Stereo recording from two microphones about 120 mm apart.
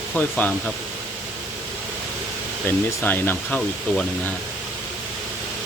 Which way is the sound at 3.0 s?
15° left (ahead or behind).